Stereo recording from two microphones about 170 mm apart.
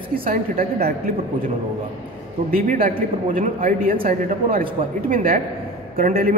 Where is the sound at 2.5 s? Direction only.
55° right (ahead or behind).